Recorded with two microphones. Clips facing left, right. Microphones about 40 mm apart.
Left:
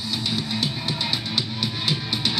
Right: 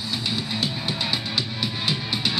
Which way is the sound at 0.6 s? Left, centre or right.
Left.